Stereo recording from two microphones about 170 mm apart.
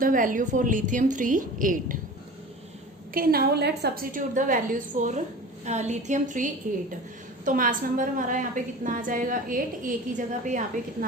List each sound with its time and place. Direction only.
0.0 s a woman's voice: 55° right (ahead or behind)
3.2 s a woman's voice: 65° right (ahead or behind); by 10.7 s 45° right (ahead or behind)